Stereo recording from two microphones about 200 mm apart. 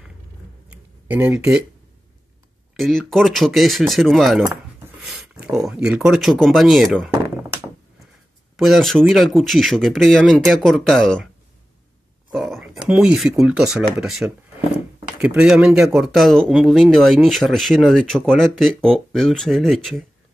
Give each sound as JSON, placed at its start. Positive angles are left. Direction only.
{"t": 0.7, "sound": "a sound", "side_deg": -10}
{"t": 2.7, "sound": "speech", "side_deg": 0}
{"t": 8.5, "sound": "speech", "side_deg": 0}
{"t": 12.3, "sound": "speech", "side_deg": 0}